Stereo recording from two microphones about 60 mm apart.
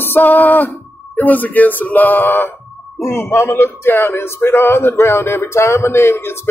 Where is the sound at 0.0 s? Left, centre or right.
Left.